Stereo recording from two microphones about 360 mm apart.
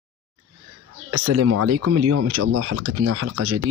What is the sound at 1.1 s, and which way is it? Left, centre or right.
Speech, right.